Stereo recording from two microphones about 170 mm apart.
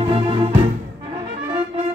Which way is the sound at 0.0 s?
35° right (ahead or behind).